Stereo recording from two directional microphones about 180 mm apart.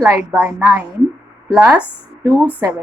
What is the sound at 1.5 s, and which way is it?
Speech, 5° right (ahead or behind).